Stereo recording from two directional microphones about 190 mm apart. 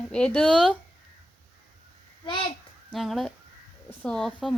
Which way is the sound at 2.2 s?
25° left (ahead or behind).